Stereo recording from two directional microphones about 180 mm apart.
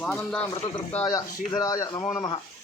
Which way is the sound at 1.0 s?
20° left (ahead or behind).